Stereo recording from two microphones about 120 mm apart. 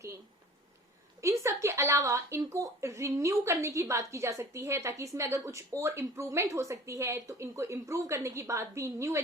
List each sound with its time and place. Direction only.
1.2 s speech: 25° right (ahead or behind)